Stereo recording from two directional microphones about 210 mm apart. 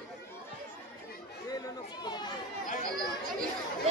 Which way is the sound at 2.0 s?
20° left (ahead or behind).